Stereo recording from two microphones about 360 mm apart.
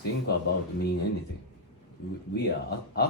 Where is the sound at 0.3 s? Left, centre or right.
Left.